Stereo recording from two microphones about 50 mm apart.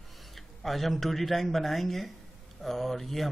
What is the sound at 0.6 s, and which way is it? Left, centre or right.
Speech, centre.